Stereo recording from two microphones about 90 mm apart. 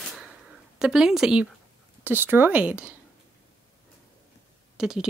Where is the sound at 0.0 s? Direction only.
Centre (ahead or behind).